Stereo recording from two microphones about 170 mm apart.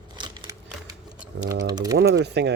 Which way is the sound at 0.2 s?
20° right (ahead or behind).